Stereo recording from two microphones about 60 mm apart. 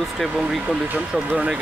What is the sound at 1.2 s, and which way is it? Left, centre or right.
Speech, right.